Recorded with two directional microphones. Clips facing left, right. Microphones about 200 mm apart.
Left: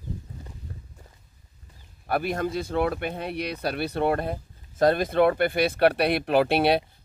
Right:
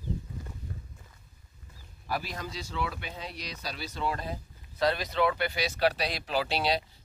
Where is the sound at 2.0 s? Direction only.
60° left (ahead or behind).